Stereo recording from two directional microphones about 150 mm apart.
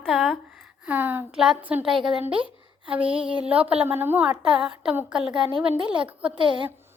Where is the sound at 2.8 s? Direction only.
10° right (ahead or behind).